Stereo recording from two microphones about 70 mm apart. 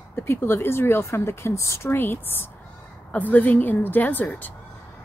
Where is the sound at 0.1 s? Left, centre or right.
Left.